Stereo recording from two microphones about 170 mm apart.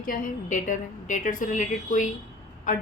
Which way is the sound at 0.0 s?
50° left (ahead or behind).